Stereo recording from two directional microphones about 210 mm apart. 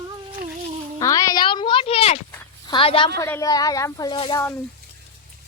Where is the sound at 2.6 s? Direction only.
25° left (ahead or behind).